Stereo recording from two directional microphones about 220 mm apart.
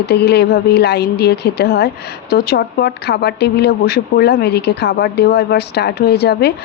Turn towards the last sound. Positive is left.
turn(degrees=50)  # may be behind; listen again after turning